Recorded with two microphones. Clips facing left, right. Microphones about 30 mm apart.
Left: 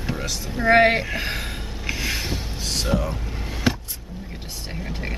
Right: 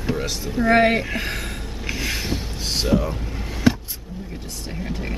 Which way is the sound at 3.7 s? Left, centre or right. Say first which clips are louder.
Right 4 dB; centre.